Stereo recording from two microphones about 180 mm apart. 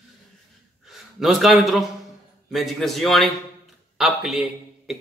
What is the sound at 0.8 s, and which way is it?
A man's voice, centre (ahead or behind).